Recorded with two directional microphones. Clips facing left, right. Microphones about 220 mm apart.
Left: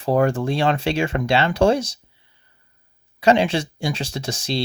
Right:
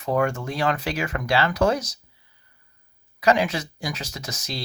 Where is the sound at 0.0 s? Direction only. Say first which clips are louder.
Left 5 dB; 35° left (ahead or behind).